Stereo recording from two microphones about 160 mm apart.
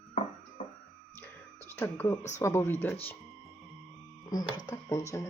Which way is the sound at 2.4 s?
15° left (ahead or behind).